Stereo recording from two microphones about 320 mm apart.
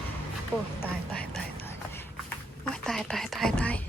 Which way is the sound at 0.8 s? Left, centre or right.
Centre.